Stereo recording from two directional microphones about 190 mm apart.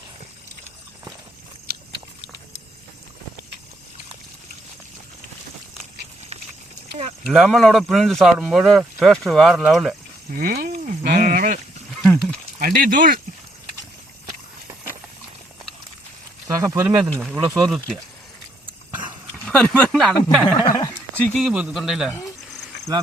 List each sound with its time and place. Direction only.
7.3 s speech: centre (ahead or behind)
10.3 s speech: 50° right (ahead or behind)
11.0 s sheep: 40° right (ahead or behind)
12.0 s a sound: centre (ahead or behind)
12.5 s speech: 45° right (ahead or behind)
16.5 s speech: 15° right (ahead or behind)
17.0 s speech: centre (ahead or behind)
17.3 s speech: 15° right (ahead or behind)
17.7 s speech: centre (ahead or behind)
18.6 s dog: 25° right (ahead or behind)
19.5 s speech: 5° left (ahead or behind)
20.5 s a sound: 25° left (ahead or behind)
21.2 s speech: centre (ahead or behind)